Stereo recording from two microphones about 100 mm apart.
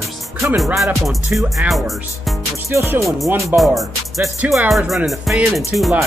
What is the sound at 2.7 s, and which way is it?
Music, 25° right (ahead or behind).